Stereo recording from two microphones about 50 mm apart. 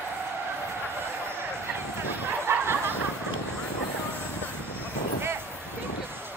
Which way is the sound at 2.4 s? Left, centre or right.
Right.